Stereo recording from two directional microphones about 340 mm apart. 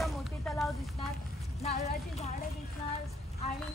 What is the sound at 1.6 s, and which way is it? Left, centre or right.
Speech, centre.